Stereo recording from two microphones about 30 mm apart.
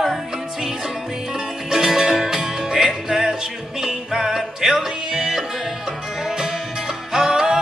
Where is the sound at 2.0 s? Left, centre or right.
Centre.